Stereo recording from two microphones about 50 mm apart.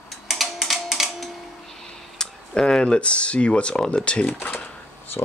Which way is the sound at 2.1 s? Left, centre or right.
Centre.